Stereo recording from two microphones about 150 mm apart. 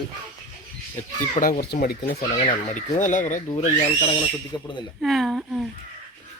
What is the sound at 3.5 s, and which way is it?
Speech, 40° left (ahead or behind).